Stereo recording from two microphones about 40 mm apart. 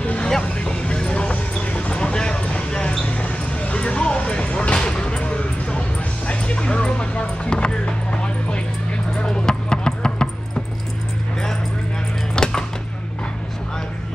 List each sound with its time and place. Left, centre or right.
0.0 s vehicle: left
0.9 s music: left
3.1 s a sound: left
4.2 s music: left
12.4 s music: left